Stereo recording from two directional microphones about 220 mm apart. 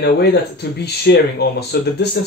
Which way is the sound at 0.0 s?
50° left (ahead or behind).